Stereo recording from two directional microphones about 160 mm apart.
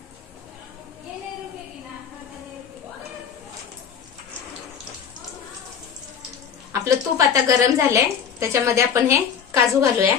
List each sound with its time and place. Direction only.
6.7 s a woman's voice: 20° right (ahead or behind)